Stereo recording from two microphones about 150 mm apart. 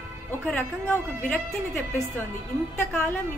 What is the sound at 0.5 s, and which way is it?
Speech, 10° left (ahead or behind).